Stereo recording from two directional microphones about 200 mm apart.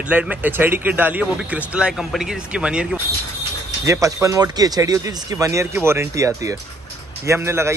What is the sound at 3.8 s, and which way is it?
Speech, 15° right (ahead or behind).